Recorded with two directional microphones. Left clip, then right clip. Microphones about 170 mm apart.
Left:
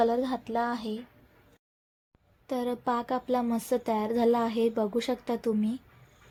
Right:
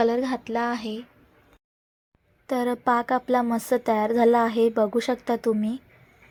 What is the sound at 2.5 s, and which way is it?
Speech, 20° right (ahead or behind).